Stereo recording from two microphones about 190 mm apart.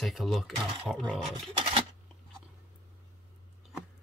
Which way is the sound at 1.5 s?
30° right (ahead or behind).